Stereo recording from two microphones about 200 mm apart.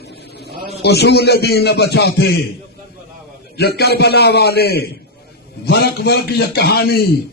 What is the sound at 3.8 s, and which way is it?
Speech, 55° left (ahead or behind).